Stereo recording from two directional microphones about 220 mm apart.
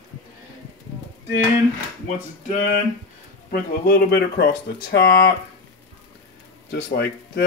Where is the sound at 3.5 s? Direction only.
45° left (ahead or behind).